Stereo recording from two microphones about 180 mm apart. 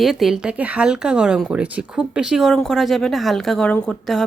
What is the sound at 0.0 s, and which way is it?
Speech, centre (ahead or behind).